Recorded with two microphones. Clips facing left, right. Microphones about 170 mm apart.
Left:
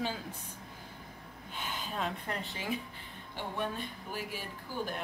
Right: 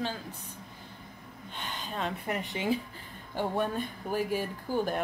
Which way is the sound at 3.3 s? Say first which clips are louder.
Right 7 dB; 45° right (ahead or behind).